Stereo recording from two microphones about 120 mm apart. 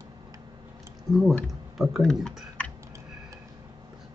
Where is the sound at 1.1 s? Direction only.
35° right (ahead or behind).